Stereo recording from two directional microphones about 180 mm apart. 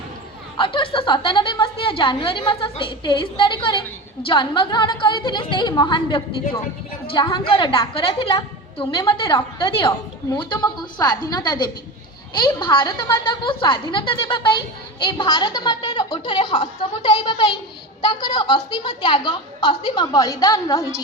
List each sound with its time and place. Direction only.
0.5 s a woman's voice: 30° left (ahead or behind)